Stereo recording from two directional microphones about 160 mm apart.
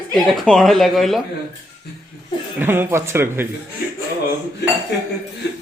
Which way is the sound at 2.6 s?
15° right (ahead or behind).